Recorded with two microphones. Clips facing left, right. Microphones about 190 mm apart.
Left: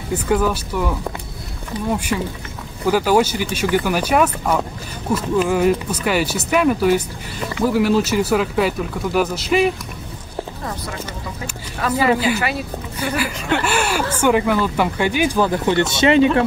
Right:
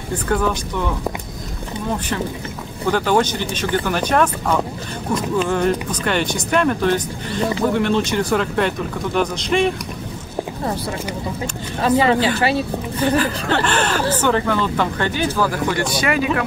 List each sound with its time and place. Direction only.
0.1 s speech: 5° left (ahead or behind)
11.8 s speech: 25° right (ahead or behind)
13.2 s speech: 10° left (ahead or behind); by 16.3 s 25° left (ahead or behind)